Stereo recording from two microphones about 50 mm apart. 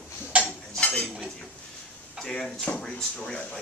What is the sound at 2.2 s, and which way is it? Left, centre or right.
Speech, centre.